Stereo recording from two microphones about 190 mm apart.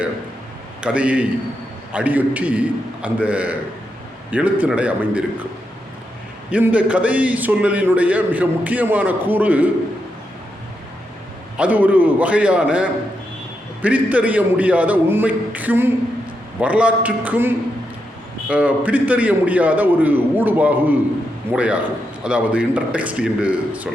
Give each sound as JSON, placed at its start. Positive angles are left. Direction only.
{"t": 0.8, "sound": "a man's voice", "side_deg": -5}
{"t": 6.5, "sound": "a man's voice", "side_deg": -5}
{"t": 11.5, "sound": "a man's voice", "side_deg": -5}